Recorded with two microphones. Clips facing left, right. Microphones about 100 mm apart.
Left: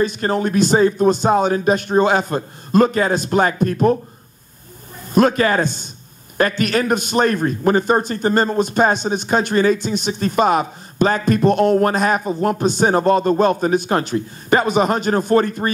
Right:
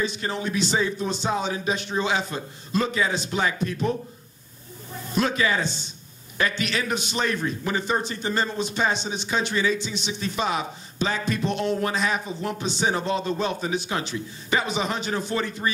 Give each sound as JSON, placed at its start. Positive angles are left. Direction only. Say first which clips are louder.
{"t": 0.0, "sound": "a man's voice", "louder": "left 9 dB", "side_deg": 50}
{"t": 5.1, "sound": "a man's voice", "louder": "left 9 dB", "side_deg": 50}